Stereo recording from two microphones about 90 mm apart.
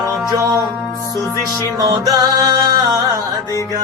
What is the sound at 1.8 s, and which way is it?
Music, 50° right (ahead or behind).